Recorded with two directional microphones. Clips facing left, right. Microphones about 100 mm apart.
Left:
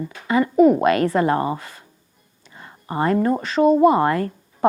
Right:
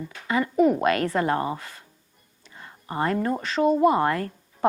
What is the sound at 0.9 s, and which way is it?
Speech, 20° left (ahead or behind).